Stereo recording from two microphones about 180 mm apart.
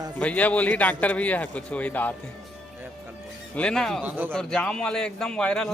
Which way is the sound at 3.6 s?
5° left (ahead or behind).